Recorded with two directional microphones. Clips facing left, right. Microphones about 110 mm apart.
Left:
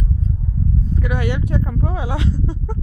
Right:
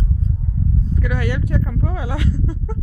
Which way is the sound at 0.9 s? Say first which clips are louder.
Left 1 dB; 20° left (ahead or behind).